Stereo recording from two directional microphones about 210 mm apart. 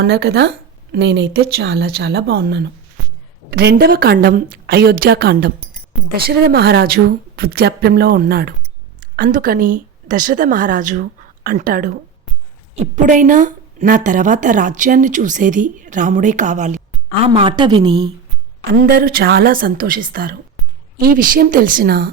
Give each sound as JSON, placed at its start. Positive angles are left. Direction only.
{"t": 0.0, "sound": "a woman's voice", "side_deg": -50}
{"t": 17.2, "sound": "a woman's voice", "side_deg": -25}
{"t": 18.7, "sound": "a woman's voice", "side_deg": -45}